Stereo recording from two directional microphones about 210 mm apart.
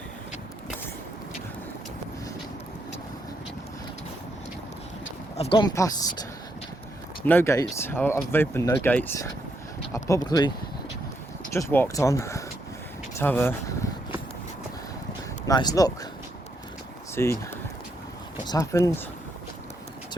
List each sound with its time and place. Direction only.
5.4 s speech: 25° left (ahead or behind)
7.3 s speech: 10° left (ahead or behind)
11.5 s speech: 10° left (ahead or behind)
15.4 s speech: 20° left (ahead or behind)
17.2 s speech: 10° left (ahead or behind)
18.4 s speech: 15° left (ahead or behind)